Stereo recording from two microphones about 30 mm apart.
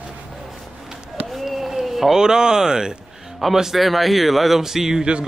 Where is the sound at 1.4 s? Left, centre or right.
Centre.